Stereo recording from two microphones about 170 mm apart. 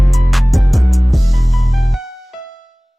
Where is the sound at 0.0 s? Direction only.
Centre (ahead or behind).